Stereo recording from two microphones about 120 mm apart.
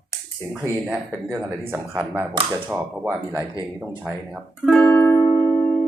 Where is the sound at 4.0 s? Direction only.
5° right (ahead or behind).